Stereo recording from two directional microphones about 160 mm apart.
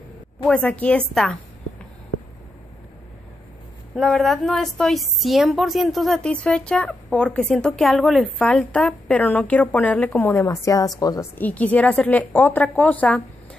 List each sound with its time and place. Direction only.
0.5 s a woman's voice: 10° left (ahead or behind)
3.9 s a woman's voice: centre (ahead or behind); by 11.2 s 25° left (ahead or behind)
11.3 s a woman's voice: 10° left (ahead or behind)